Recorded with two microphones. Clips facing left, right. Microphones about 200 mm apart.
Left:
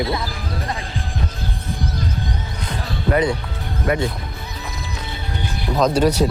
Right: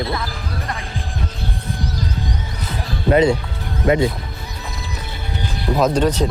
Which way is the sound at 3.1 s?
25° right (ahead or behind).